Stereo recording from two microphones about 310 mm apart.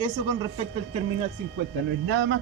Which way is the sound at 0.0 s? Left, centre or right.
Centre.